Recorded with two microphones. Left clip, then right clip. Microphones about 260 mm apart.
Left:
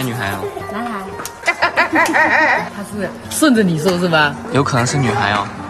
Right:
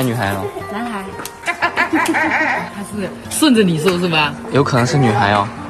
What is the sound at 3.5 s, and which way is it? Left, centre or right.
Speech, centre.